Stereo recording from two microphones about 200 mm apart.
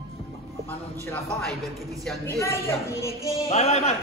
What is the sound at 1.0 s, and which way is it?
Speech, 5° left (ahead or behind).